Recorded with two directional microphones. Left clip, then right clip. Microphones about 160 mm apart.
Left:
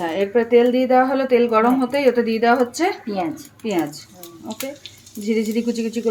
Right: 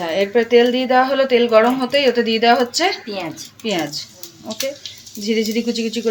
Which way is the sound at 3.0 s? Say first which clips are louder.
Left 2 dB; 75° left (ahead or behind).